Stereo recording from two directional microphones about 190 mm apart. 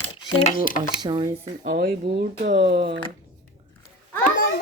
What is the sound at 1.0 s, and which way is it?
Speech, 25° right (ahead or behind).